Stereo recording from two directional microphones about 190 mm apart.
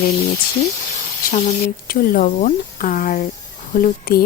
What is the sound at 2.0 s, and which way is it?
Speech, 50° left (ahead or behind).